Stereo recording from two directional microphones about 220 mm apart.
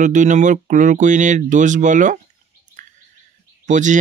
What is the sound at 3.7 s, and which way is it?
Speech, 35° right (ahead or behind).